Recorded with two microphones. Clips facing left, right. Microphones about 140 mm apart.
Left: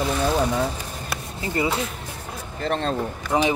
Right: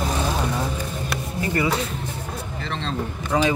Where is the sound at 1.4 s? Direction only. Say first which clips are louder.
Right 1 dB; 25° left (ahead or behind).